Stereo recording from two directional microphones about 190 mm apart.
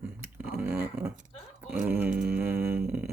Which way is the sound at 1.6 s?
5° right (ahead or behind).